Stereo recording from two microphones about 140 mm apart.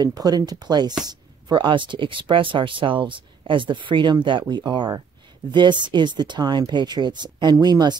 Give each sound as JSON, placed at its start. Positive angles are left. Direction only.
{"t": 0.0, "sound": "speech", "side_deg": -25}